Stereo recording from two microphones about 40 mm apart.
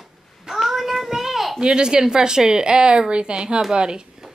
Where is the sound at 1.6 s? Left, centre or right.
Right.